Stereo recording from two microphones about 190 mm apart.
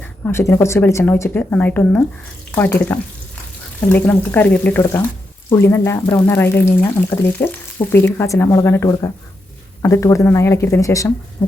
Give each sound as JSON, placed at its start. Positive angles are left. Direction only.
{"t": 0.3, "sound": "speech", "side_deg": 15}